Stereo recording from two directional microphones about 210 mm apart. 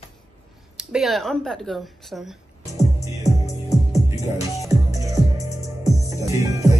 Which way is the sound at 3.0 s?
15° left (ahead or behind).